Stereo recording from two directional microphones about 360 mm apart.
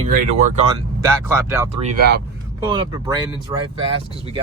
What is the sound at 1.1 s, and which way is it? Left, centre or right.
Speech, centre.